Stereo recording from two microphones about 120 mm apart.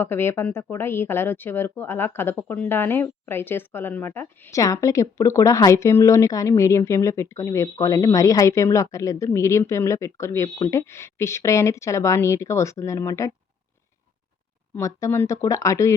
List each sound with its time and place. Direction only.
0.0 s speech: 20° left (ahead or behind)
14.8 s speech: 25° left (ahead or behind)